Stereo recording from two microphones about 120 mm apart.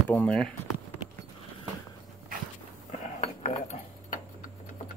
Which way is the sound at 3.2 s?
65° left (ahead or behind).